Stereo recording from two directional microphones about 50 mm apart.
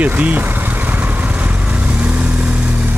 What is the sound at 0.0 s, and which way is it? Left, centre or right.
Speech, right.